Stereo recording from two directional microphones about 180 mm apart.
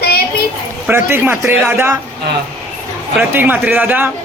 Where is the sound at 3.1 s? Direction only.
10° right (ahead or behind).